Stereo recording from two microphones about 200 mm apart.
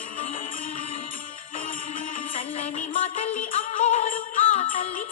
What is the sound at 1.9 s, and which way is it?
Music, 30° left (ahead or behind).